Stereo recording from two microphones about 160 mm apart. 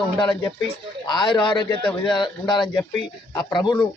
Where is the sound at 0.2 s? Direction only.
30° left (ahead or behind).